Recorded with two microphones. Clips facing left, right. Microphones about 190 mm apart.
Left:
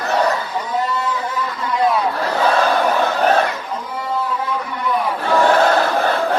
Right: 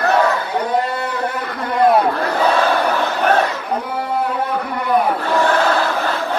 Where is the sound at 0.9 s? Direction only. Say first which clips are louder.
Right 1 dB; 60° right (ahead or behind).